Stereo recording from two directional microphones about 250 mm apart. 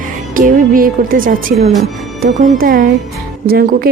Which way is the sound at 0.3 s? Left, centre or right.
Right.